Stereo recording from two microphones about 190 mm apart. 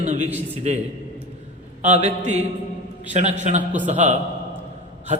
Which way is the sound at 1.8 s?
35° right (ahead or behind).